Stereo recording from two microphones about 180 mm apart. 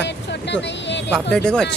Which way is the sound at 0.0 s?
75° left (ahead or behind).